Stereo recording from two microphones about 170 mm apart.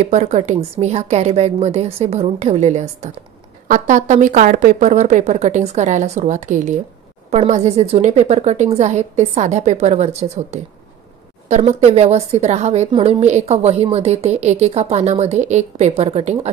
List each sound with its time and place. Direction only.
0.0 s a woman's voice: 40° right (ahead or behind)